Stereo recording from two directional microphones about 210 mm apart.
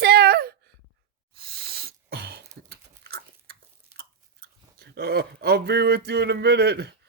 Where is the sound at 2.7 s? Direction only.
50° right (ahead or behind).